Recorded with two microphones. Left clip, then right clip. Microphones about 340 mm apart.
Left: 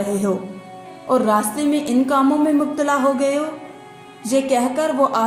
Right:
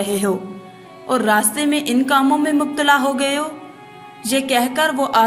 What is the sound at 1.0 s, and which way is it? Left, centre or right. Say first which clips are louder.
Speech: left 1 dB; right.